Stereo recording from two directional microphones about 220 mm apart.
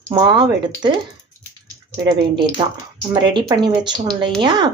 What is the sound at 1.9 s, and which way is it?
Speech, 20° right (ahead or behind).